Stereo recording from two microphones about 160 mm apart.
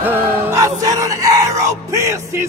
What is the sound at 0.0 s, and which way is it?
Music, 15° right (ahead or behind).